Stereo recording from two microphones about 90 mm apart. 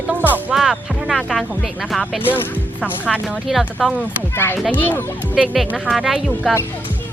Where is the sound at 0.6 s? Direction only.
5° right (ahead or behind).